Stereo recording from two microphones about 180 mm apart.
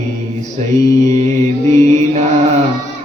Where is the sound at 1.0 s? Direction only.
40° right (ahead or behind).